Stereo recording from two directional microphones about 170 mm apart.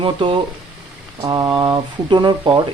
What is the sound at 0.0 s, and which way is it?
Speech, 30° right (ahead or behind).